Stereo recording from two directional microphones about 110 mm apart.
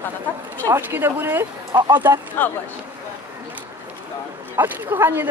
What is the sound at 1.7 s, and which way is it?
Speech, 45° right (ahead or behind).